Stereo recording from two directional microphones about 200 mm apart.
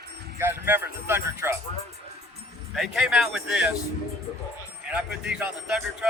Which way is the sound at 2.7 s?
Centre (ahead or behind).